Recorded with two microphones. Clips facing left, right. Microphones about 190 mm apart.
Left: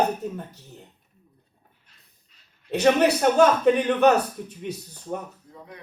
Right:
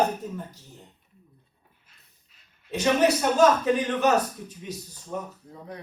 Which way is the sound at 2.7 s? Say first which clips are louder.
Left 3 dB; 60° left (ahead or behind).